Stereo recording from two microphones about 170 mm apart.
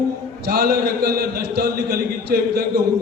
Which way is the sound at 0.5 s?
70° right (ahead or behind).